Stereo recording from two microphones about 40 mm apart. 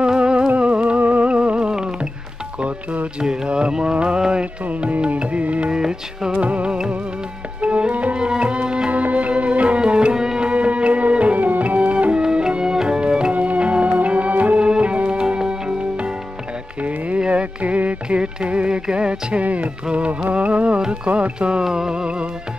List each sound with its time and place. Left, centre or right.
0.0 s music: right
2.6 s speech: right
3.2 s music: right
4.6 s music: right
5.7 s music: centre
6.3 s music: right
8.9 s music: right; by 10.5 s centre
10.5 s music: right
12.2 s music: right
13.3 s music: right
14.6 s music: right
17.3 s music: right
19.4 s music: right